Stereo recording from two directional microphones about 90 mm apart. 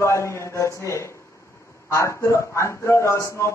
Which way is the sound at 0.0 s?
30° left (ahead or behind).